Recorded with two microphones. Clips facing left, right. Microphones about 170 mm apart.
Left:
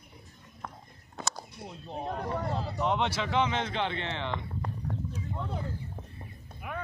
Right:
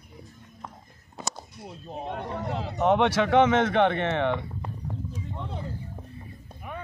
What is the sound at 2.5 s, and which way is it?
Speech, 75° right (ahead or behind).